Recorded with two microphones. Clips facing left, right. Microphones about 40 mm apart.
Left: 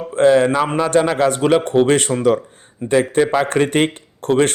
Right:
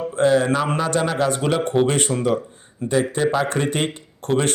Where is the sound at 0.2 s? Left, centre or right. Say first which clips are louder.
Left 5 dB; left.